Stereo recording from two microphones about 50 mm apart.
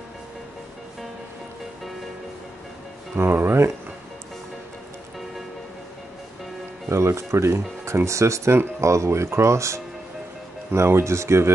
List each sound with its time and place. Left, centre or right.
3.2 s speech: right
6.9 s speech: right
10.7 s speech: right